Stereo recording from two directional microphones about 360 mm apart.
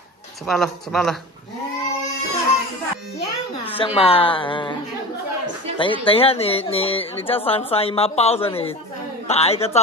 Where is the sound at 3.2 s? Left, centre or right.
Centre.